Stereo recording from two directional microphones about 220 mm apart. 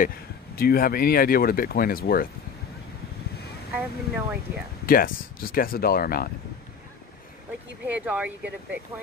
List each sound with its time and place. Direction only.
0.6 s speech: 45° left (ahead or behind)
3.7 s speech: 5° right (ahead or behind)
4.8 s speech: 40° left (ahead or behind)
7.8 s speech: 5° right (ahead or behind)